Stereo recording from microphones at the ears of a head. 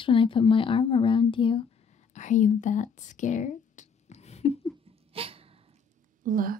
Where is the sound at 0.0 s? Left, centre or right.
Left.